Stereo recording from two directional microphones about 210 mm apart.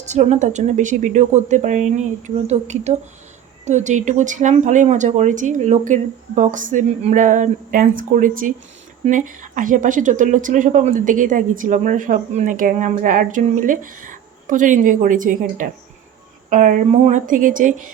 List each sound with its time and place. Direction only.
0.0 s a woman's voice: 35° right (ahead or behind)